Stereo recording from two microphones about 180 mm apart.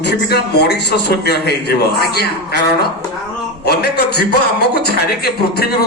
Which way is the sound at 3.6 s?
60° left (ahead or behind).